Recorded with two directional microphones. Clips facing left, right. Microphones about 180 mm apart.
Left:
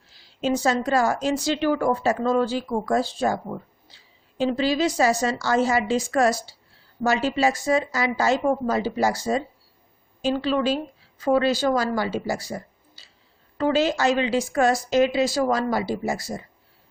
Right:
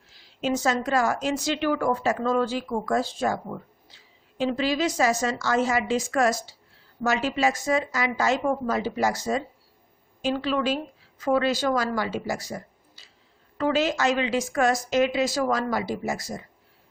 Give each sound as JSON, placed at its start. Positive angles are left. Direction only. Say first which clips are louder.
{"t": 0.4, "sound": "a woman's voice", "louder": "left 2 dB", "side_deg": 35}